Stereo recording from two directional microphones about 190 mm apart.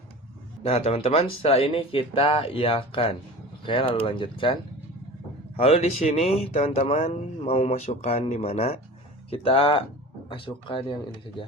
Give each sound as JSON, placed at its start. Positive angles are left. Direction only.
{"t": 0.6, "sound": "speech", "side_deg": 30}
{"t": 5.5, "sound": "speech", "side_deg": 30}